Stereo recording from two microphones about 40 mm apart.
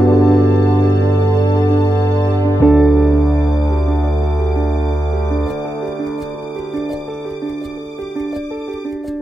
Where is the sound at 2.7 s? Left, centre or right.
Centre.